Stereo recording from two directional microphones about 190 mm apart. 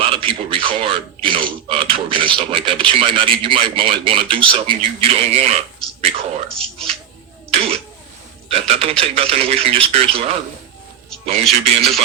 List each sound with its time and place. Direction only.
0.0 s a man's voice: 30° right (ahead or behind)
6.6 s speech: centre (ahead or behind)
7.5 s speech: 30° right (ahead or behind)
11.6 s speech: 30° right (ahead or behind)